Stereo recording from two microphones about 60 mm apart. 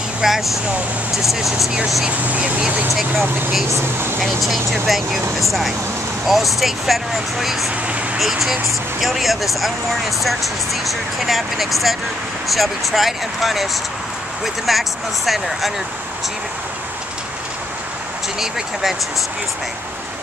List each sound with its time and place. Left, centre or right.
0.2 s speech: centre
2.0 s speech: right
2.9 s speech: centre
3.7 s speech: right
4.2 s speech: centre
18.4 s speech: centre